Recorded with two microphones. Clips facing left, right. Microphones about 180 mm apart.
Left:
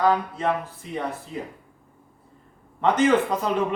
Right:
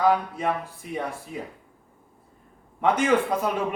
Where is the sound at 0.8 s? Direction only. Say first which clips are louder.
Right 2 dB; 55° right (ahead or behind).